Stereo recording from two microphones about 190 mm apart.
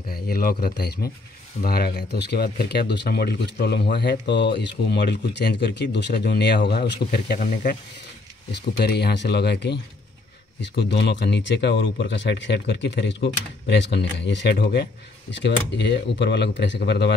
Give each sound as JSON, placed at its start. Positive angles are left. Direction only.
{"t": 0.1, "sound": "speech", "side_deg": 50}
{"t": 8.5, "sound": "speech", "side_deg": 60}